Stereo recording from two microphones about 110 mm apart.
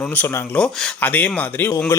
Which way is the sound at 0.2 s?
15° left (ahead or behind).